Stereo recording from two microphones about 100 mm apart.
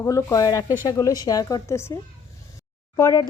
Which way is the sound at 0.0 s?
30° left (ahead or behind).